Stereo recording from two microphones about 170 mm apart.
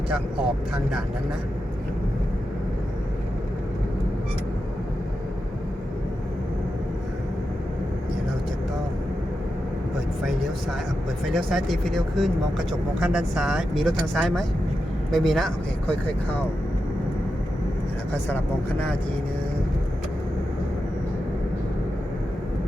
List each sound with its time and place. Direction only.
11.3 s speech: centre (ahead or behind)
18.1 s speech: 10° left (ahead or behind)